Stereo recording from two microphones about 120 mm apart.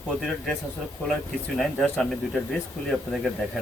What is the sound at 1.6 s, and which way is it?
Speech, 5° left (ahead or behind).